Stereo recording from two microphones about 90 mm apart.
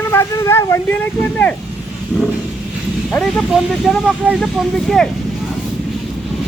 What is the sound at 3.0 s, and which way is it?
Speech, 5° left (ahead or behind).